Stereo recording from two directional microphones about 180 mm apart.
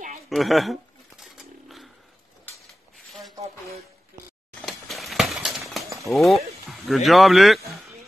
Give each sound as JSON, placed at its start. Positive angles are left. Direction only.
{"t": 0.3, "sound": "bird", "side_deg": 0}
{"t": 4.6, "sound": "a sound", "side_deg": 0}
{"t": 6.0, "sound": "speech", "side_deg": 0}